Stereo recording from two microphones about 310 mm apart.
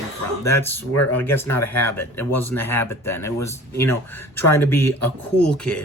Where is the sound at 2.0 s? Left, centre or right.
Left.